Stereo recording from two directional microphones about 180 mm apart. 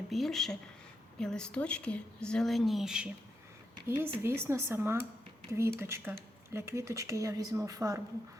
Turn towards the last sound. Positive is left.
turn(degrees=-20)  # may be behind; listen again after turning